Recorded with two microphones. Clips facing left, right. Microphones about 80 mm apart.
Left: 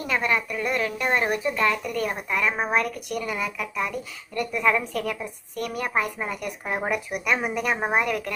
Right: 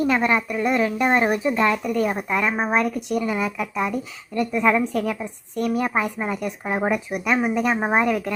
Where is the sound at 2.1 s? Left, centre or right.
Right.